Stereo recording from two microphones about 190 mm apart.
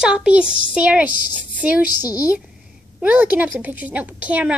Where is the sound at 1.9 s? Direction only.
20° left (ahead or behind).